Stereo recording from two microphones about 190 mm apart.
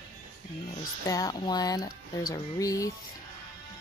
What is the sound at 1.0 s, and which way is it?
Speech, 20° left (ahead or behind).